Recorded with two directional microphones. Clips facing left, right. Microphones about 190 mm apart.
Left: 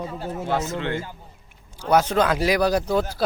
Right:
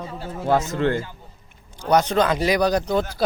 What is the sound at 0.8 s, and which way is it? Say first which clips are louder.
Speech: right 6 dB; 40° right (ahead or behind).